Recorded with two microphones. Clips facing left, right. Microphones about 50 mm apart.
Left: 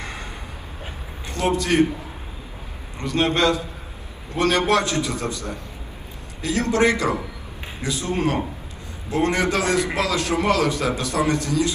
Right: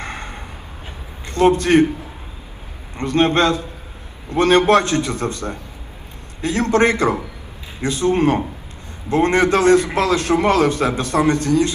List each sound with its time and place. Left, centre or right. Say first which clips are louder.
0.0 s vehicle: right 4 dB; right
1.3 s a man's voice: right 7 dB; right
3.0 s a man's voice: right 4 dB; right